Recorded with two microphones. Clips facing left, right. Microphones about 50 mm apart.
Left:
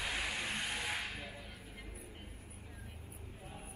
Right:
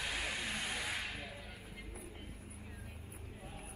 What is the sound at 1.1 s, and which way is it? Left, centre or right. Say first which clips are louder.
Whip: even; centre.